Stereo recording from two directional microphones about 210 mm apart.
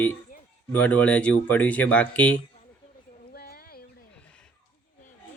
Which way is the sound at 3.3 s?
45° left (ahead or behind).